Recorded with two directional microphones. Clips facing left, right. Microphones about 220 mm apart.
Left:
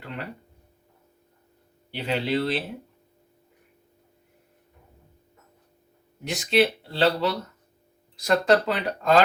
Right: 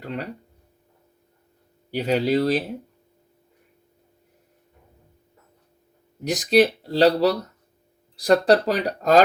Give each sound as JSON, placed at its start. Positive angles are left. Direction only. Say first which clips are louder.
{"t": 1.9, "sound": "speech", "louder": "right 5 dB", "side_deg": -40}
{"t": 6.2, "sound": "speech", "louder": "right 4 dB", "side_deg": -40}